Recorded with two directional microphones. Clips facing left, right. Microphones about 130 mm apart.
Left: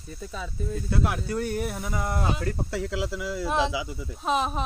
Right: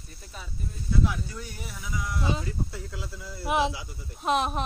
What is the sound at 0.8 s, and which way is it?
Speech, 65° left (ahead or behind).